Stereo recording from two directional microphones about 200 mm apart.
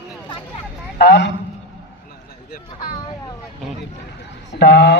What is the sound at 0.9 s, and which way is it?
Speech, 60° left (ahead or behind).